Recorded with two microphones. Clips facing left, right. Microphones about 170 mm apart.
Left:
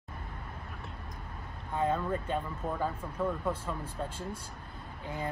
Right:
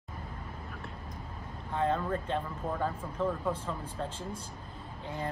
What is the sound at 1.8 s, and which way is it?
Speech, 10° left (ahead or behind).